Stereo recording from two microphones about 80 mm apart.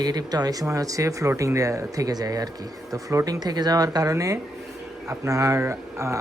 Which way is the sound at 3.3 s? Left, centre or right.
Right.